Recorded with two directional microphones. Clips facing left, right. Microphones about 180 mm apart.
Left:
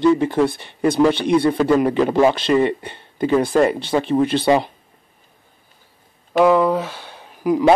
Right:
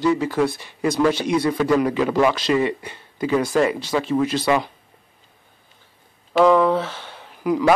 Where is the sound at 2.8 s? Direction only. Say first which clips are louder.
Left 4 dB; 25° left (ahead or behind).